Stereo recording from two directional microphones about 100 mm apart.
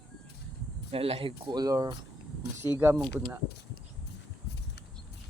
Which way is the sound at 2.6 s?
20° right (ahead or behind).